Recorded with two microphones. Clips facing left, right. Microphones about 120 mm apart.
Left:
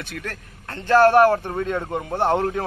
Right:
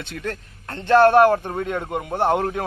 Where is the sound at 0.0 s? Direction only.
25° right (ahead or behind).